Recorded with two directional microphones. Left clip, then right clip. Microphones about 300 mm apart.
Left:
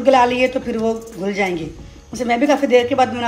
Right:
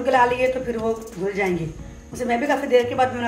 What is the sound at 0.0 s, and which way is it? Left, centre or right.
Speech, left.